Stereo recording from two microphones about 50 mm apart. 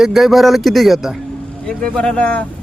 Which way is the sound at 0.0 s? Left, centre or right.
Centre.